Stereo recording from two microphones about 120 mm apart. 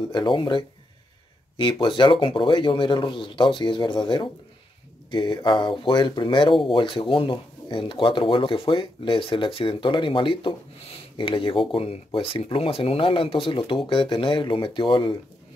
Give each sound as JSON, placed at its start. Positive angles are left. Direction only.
{"t": 0.0, "sound": "speech", "side_deg": 40}